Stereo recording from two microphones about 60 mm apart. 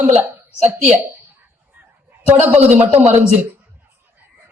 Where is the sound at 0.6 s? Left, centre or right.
Right.